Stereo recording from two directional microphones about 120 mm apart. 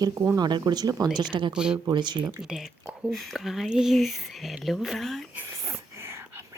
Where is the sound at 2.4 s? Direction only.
5° right (ahead or behind).